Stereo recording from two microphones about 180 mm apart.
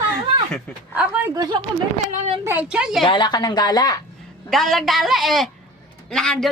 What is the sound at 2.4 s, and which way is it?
Speech, 10° right (ahead or behind).